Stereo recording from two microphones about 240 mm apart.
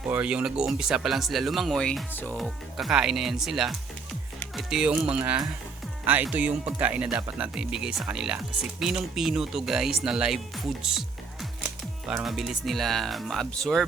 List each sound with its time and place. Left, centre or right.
0.1 s speech: centre
4.4 s music: centre
5.1 s speech: centre